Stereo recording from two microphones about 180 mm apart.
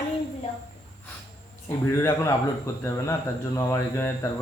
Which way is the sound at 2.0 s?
15° left (ahead or behind).